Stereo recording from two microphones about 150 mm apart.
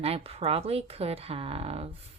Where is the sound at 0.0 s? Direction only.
40° right (ahead or behind).